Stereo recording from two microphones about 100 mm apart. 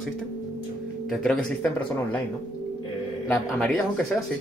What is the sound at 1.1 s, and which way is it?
Speech, 5° left (ahead or behind).